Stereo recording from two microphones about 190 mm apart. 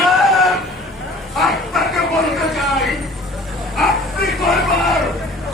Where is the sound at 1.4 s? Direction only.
Centre (ahead or behind).